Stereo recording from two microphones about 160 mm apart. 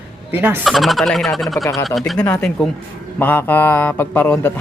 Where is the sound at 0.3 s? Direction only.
10° right (ahead or behind).